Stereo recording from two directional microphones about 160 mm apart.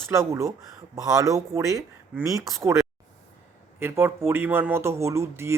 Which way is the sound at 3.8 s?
15° right (ahead or behind).